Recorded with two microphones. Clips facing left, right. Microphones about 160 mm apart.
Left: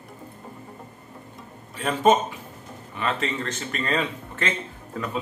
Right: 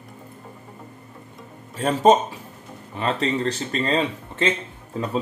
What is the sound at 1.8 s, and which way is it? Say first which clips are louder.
Speech: right 3 dB; 35° right (ahead or behind).